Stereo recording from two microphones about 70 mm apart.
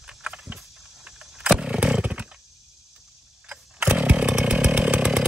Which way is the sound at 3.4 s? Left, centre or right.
Centre.